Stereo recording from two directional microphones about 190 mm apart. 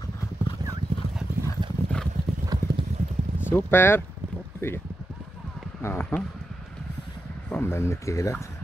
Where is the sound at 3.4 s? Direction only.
10° left (ahead or behind).